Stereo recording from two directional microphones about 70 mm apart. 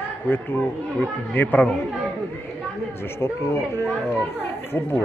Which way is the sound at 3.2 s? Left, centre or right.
Left.